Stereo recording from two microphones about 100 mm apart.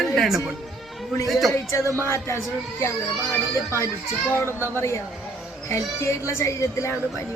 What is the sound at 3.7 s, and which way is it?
Speech, 25° left (ahead or behind).